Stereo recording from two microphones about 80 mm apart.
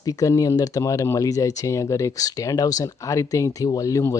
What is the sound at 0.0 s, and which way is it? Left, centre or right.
Speech, left.